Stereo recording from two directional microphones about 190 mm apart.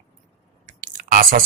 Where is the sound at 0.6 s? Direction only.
40° right (ahead or behind).